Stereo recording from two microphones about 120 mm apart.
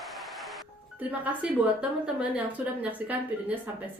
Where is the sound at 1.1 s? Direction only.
10° right (ahead or behind).